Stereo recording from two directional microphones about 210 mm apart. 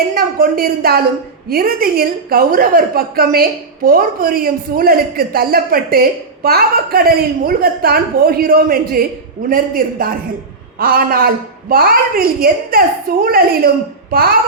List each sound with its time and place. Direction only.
0.1 s speech: 45° right (ahead or behind)